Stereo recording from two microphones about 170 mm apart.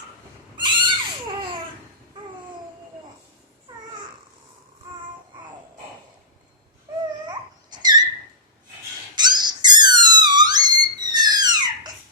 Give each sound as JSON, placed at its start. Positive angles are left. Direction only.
{"t": 0.5, "sound": "neigh", "side_deg": -25}
{"t": 7.3, "sound": "dog", "side_deg": -25}
{"t": 9.1, "sound": "dog", "side_deg": -25}
{"t": 10.0, "sound": "theremin", "side_deg": -25}